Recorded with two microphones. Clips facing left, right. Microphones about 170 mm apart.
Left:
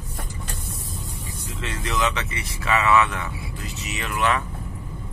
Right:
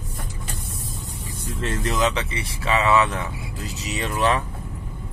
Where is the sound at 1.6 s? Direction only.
45° right (ahead or behind).